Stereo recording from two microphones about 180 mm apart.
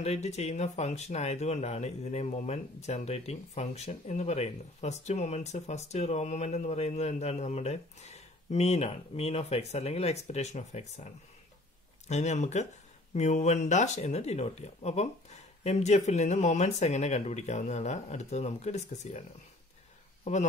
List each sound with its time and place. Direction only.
0.0 s speech: 40° left (ahead or behind)